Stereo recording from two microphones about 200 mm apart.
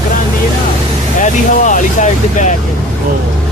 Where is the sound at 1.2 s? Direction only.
40° left (ahead or behind).